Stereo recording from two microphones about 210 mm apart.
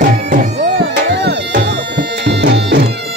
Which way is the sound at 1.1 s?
55° right (ahead or behind).